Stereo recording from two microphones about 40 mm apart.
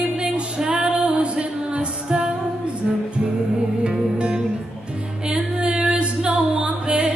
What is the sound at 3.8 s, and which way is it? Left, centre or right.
Music, right.